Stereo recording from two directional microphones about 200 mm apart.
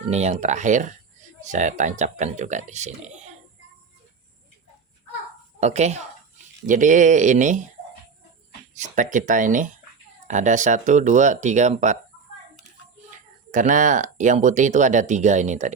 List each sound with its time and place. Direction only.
0.1 s speech: 35° right (ahead or behind)
5.5 s speech: 35° right (ahead or behind)
8.7 s speech: 40° right (ahead or behind)
13.1 s speech: 40° right (ahead or behind)